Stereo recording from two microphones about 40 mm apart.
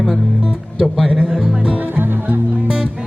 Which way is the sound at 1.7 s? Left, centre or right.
Right.